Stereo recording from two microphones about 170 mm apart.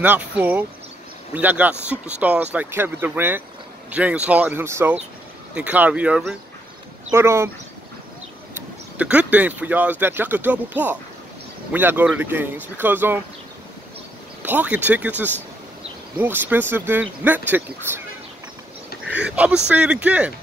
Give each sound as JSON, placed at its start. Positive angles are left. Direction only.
{"t": 0.0, "sound": "speech", "side_deg": -10}
{"t": 8.9, "sound": "speech", "side_deg": -10}
{"t": 14.4, "sound": "speech", "side_deg": -10}
{"t": 19.0, "sound": "speech", "side_deg": -5}